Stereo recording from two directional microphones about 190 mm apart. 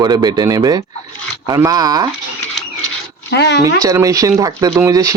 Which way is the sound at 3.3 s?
65° left (ahead or behind).